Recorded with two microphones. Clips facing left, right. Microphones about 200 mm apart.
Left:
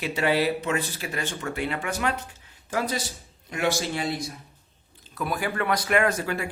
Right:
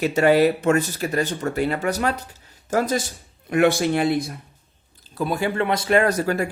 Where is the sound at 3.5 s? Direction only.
55° right (ahead or behind).